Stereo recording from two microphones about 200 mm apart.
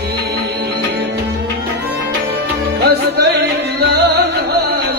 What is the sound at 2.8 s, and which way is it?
Music, 55° right (ahead or behind).